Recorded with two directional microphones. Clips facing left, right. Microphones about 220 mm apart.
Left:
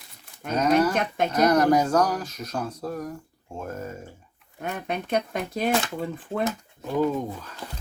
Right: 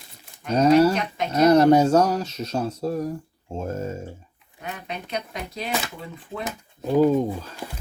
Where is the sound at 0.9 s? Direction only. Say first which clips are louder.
Left 2 dB; 50° left (ahead or behind).